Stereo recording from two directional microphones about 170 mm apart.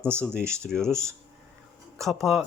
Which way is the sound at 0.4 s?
15° right (ahead or behind).